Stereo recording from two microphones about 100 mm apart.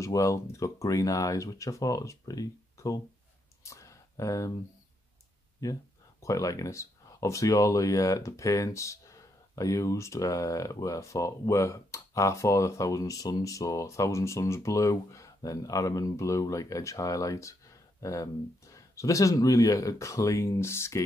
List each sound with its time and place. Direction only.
0.0 s speech: 30° left (ahead or behind)
3.6 s a sound: 30° left (ahead or behind)
5.6 s speech: 35° left (ahead or behind)